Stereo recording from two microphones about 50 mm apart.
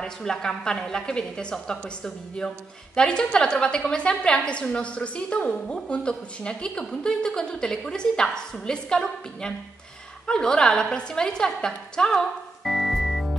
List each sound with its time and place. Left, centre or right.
0.0 s a woman's voice: centre
12.1 s music: centre